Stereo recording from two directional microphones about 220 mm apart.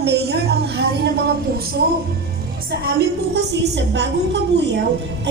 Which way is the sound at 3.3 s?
50° right (ahead or behind).